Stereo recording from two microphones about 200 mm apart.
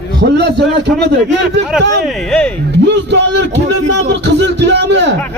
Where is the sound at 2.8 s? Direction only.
60° right (ahead or behind).